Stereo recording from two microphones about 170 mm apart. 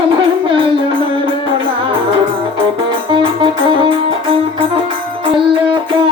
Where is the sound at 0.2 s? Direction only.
30° right (ahead or behind).